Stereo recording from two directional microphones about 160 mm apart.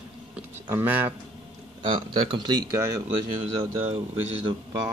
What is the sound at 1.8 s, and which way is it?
Speech, 30° right (ahead or behind).